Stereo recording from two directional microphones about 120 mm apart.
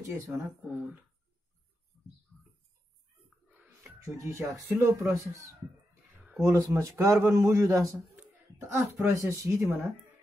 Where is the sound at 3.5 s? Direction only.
25° right (ahead or behind).